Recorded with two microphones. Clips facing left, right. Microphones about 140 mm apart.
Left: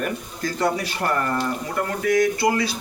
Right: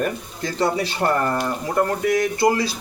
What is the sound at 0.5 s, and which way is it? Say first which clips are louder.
Speech: right 2 dB; 25° right (ahead or behind).